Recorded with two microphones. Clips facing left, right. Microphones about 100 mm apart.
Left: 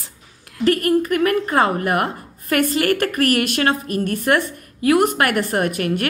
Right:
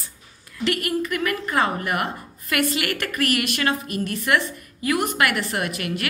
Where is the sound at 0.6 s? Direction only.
40° left (ahead or behind).